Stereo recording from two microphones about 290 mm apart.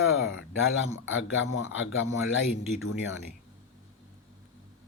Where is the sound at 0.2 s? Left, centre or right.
Left.